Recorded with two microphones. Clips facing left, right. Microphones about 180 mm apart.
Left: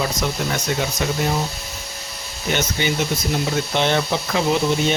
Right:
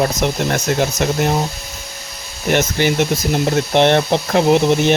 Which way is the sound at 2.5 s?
70° right (ahead or behind).